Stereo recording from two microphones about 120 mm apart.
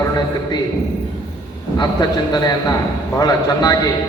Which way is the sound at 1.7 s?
35° left (ahead or behind).